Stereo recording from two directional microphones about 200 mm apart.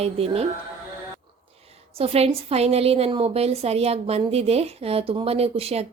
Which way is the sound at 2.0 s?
30° right (ahead or behind).